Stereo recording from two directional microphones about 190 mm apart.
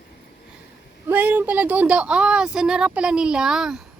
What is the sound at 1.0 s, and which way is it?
Speech, 10° right (ahead or behind).